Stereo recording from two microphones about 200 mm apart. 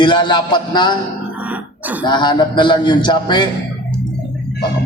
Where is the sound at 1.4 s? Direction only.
10° right (ahead or behind).